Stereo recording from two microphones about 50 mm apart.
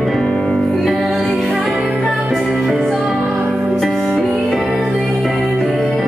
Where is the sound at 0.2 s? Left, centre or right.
Centre.